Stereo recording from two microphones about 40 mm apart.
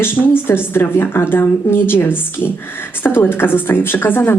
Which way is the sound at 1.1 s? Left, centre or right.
Left.